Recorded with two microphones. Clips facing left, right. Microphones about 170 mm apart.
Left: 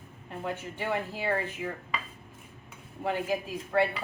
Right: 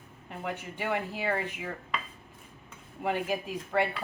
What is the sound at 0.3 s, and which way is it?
Speech, 15° right (ahead or behind).